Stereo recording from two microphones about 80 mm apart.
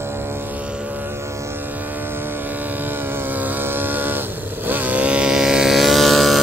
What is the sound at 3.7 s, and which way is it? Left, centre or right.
Vehicle, right.